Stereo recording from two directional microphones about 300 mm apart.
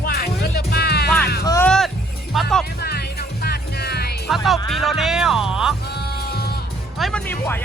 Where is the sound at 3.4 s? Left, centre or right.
Left.